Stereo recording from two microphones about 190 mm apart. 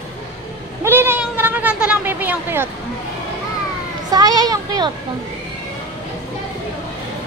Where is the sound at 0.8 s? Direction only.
10° right (ahead or behind).